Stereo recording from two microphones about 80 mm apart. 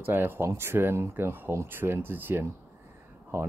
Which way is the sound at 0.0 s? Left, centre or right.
Right.